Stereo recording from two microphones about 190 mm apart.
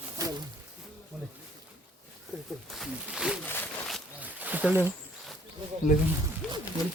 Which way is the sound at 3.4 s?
10° left (ahead or behind).